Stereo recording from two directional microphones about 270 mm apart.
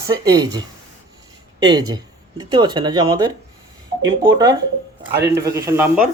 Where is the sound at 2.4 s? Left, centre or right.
Centre.